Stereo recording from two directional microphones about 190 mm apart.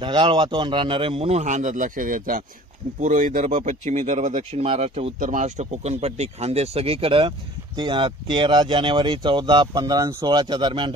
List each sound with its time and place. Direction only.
0.0 s a man's voice: 25° right (ahead or behind)